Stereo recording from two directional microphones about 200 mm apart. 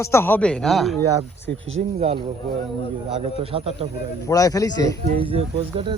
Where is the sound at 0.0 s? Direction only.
15° left (ahead or behind).